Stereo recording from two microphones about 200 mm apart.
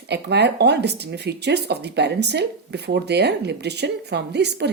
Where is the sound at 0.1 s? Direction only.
55° right (ahead or behind).